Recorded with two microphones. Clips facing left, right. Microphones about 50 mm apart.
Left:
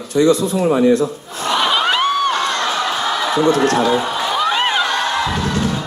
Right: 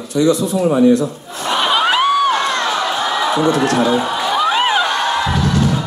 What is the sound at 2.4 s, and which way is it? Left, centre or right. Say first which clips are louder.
Run: right 1 dB; right.